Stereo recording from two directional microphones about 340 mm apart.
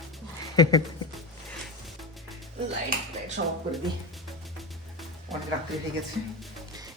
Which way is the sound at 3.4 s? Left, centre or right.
Right.